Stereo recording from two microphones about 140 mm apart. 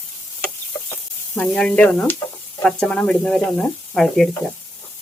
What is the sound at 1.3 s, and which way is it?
Speech, 5° left (ahead or behind).